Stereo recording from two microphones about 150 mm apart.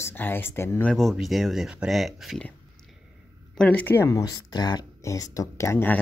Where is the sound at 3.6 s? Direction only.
10° left (ahead or behind).